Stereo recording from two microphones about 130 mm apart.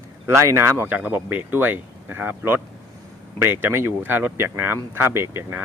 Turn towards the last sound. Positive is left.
turn(degrees=-20)  # may be behind; listen again after turning